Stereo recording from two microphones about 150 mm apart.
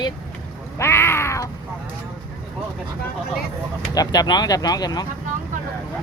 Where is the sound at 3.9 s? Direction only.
25° left (ahead or behind).